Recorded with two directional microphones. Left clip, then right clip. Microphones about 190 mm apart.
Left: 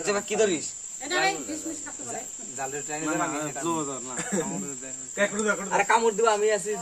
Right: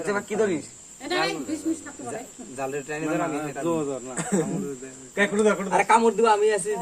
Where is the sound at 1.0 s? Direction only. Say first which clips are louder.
Even; 50° right (ahead or behind).